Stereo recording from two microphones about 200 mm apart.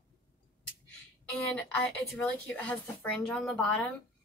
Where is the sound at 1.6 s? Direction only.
5° left (ahead or behind).